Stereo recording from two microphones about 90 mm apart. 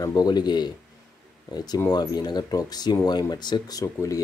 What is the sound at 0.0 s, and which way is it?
Speech, 50° left (ahead or behind).